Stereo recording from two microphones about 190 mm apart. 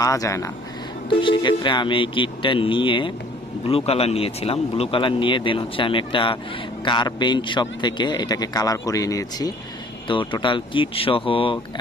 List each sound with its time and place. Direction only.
0.0 s speech: 15° left (ahead or behind)